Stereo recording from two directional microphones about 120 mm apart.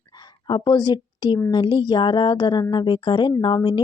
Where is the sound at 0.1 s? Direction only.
40° left (ahead or behind).